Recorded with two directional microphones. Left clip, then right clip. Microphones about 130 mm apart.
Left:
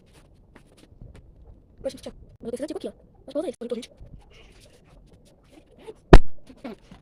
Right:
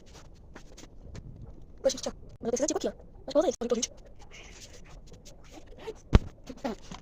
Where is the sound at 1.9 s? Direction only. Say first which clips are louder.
Right 5 dB; 25° left (ahead or behind).